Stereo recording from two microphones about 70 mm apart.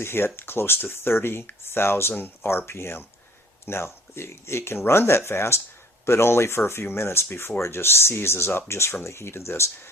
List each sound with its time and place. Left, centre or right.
0.0 s speech: left